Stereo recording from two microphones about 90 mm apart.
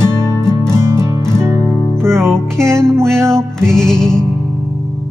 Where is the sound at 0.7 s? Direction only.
30° right (ahead or behind).